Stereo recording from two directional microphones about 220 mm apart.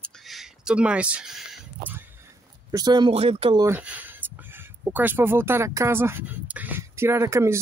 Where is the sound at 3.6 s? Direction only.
5° right (ahead or behind).